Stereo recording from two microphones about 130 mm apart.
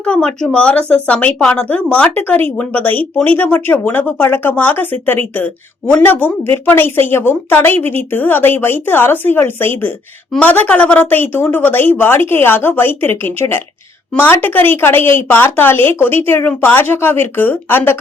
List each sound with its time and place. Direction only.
0.0 s speech: 5° left (ahead or behind)